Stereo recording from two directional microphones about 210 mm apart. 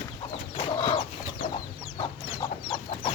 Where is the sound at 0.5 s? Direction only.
25° left (ahead or behind).